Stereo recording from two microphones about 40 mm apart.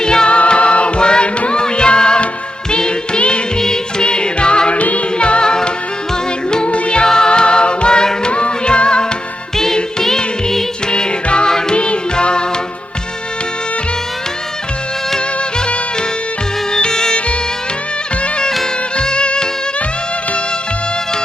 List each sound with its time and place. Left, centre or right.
0.0 s music: centre
4.8 s music: left
5.1 s music: left
7.0 s music: centre
10.0 s music: centre
15.1 s music: left
18.2 s music: left